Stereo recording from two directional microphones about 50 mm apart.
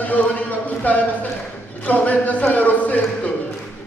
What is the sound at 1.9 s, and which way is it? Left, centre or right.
Speech, left.